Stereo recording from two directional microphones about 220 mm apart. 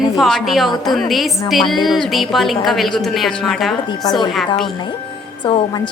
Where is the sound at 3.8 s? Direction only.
15° left (ahead or behind).